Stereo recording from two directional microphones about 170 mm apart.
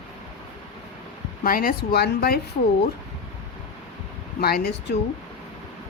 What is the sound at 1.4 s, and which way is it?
Speech, 55° left (ahead or behind).